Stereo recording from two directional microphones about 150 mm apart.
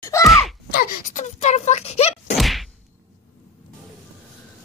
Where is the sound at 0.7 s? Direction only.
75° left (ahead or behind); by 2.3 s 45° left (ahead or behind).